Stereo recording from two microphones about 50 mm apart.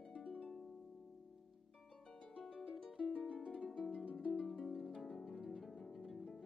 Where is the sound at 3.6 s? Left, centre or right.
Centre.